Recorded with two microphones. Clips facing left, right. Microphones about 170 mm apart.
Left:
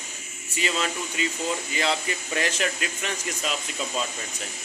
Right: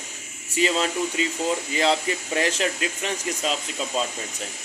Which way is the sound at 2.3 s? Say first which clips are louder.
Right 3 dB; 30° right (ahead or behind).